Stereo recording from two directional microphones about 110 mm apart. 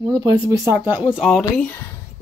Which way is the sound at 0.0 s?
40° right (ahead or behind).